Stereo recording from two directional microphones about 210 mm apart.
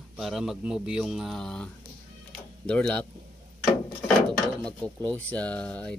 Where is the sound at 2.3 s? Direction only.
5° left (ahead or behind).